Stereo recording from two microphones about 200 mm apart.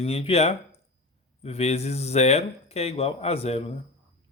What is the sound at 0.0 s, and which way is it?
Speech, 30° left (ahead or behind).